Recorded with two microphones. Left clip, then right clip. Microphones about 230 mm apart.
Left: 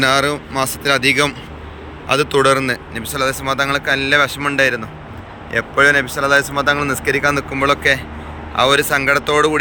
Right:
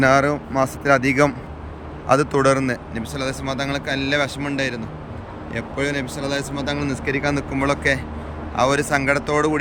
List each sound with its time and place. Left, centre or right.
0.0 s speech: centre